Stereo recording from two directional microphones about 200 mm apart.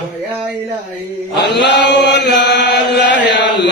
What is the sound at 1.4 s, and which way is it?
Chant, 60° left (ahead or behind).